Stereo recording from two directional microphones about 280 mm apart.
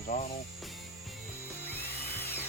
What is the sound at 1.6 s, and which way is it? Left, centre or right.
Music, centre.